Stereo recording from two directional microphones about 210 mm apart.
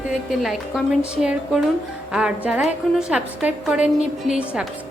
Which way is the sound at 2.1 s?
5° right (ahead or behind).